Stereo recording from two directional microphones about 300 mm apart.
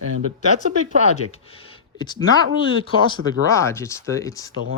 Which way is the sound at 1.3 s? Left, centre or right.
Centre.